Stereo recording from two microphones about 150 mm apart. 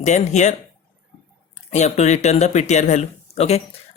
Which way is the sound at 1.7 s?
45° left (ahead or behind).